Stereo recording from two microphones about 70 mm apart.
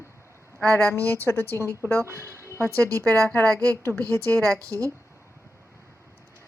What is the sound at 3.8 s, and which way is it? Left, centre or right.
Speech, left.